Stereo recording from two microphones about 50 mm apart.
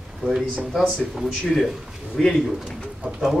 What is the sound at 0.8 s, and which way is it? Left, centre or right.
Speech, centre.